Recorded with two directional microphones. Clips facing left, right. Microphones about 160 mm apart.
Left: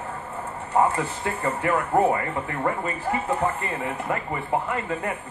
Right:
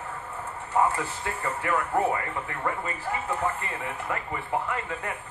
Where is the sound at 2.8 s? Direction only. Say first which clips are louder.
Left 5 dB; 25° left (ahead or behind).